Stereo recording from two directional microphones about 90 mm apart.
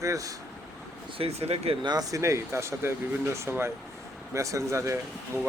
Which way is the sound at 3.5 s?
20° right (ahead or behind).